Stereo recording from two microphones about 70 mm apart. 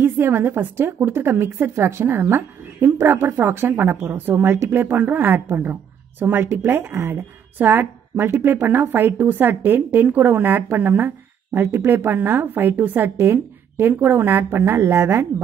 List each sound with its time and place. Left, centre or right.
0.0 s a woman's voice: right